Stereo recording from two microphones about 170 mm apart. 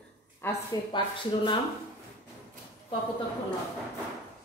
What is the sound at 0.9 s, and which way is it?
Speech, 30° left (ahead or behind).